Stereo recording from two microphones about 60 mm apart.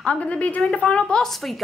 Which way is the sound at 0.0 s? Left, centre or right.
Centre.